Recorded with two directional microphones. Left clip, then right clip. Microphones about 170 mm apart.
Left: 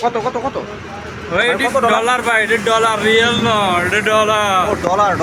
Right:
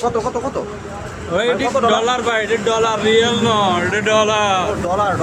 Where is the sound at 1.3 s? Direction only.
5° right (ahead or behind).